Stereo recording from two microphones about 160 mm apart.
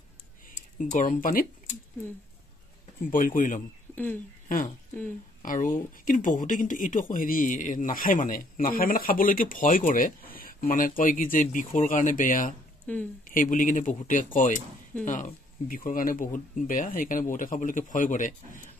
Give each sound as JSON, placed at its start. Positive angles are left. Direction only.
{"t": 0.7, "sound": "speech", "side_deg": 55}
{"t": 3.1, "sound": "speech", "side_deg": 60}
{"t": 3.9, "sound": "speech", "side_deg": 10}
{"t": 5.4, "sound": "speech", "side_deg": 55}
{"t": 12.8, "sound": "speech", "side_deg": 10}
{"t": 13.2, "sound": "speech", "side_deg": 55}